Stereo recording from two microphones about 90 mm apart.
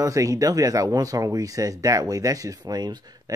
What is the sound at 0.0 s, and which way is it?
Speech, 40° right (ahead or behind).